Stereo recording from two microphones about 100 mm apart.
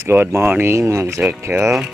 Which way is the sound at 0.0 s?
25° right (ahead or behind).